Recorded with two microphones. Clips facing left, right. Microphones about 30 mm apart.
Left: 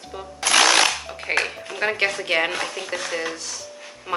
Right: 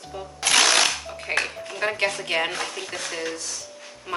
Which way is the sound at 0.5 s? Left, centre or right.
Centre.